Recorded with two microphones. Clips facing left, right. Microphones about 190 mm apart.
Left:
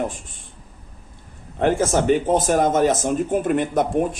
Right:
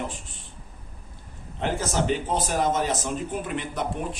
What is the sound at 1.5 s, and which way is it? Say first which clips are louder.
Speech: left 8 dB; 50° left (ahead or behind).